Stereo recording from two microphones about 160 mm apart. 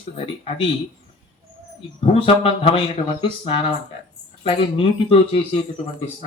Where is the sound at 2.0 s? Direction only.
35° left (ahead or behind).